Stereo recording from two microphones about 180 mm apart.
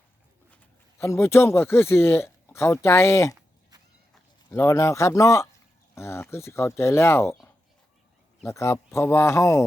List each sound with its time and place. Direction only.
0.9 s speech: 15° left (ahead or behind)
4.5 s speech: 15° left (ahead or behind)
8.4 s speech: 15° left (ahead or behind)